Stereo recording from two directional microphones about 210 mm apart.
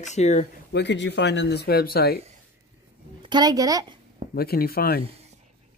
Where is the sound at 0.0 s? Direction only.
35° left (ahead or behind).